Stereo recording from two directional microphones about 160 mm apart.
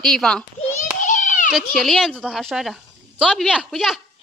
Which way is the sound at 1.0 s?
50° left (ahead or behind).